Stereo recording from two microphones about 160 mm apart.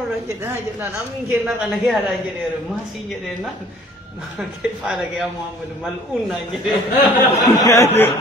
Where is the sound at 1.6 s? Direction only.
5° right (ahead or behind).